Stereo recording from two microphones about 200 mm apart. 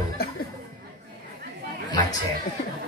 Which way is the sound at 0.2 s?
50° left (ahead or behind).